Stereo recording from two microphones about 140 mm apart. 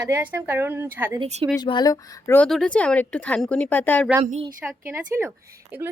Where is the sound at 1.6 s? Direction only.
30° left (ahead or behind).